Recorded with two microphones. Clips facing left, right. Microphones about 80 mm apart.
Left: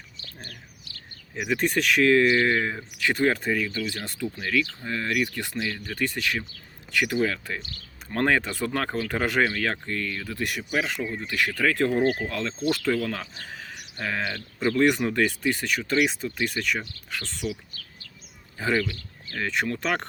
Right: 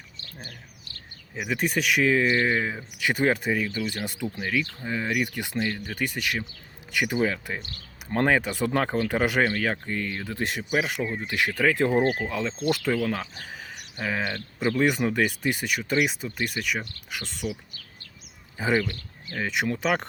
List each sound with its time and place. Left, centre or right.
1.4 s speech: centre
2.2 s speech: centre
12.0 s speech: centre
18.5 s speech: centre